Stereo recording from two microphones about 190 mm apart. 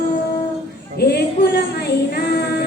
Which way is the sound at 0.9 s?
55° left (ahead or behind).